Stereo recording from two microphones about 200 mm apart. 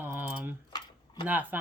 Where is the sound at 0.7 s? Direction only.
20° left (ahead or behind).